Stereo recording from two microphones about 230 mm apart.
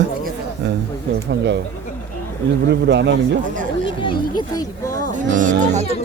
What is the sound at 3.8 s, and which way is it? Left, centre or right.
Speech, left.